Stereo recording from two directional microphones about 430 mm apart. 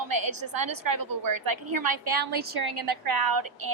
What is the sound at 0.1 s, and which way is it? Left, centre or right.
A woman's voice, right.